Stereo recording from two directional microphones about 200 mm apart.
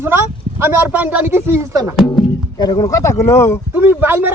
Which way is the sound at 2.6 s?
20° left (ahead or behind).